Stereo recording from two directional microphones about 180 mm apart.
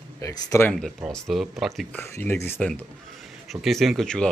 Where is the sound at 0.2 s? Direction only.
15° left (ahead or behind).